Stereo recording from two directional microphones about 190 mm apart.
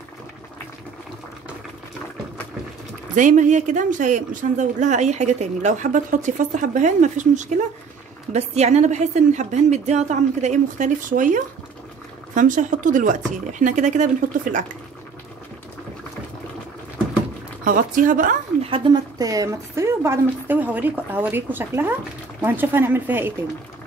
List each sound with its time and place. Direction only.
3.2 s a woman's voice: 40° right (ahead or behind)
17.6 s speech: 45° right (ahead or behind)
18.6 s a woman's voice: 25° right (ahead or behind)